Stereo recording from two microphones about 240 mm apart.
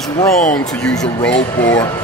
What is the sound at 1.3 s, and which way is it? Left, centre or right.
Speech, left.